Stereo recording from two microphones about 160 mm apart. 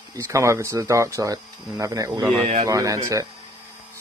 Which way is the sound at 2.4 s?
45° right (ahead or behind).